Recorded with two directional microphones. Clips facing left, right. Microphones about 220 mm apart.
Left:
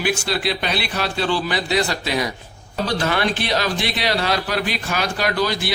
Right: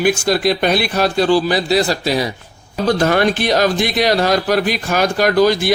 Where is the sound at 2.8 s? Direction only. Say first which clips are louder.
Right 7 dB; 45° right (ahead or behind).